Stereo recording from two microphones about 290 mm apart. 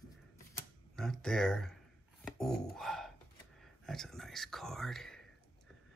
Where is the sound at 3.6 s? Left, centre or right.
Centre.